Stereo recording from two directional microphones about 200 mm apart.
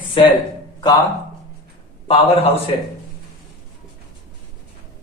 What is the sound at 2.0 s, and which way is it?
Speech, 30° left (ahead or behind).